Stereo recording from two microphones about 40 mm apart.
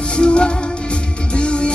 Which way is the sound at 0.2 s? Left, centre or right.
Left.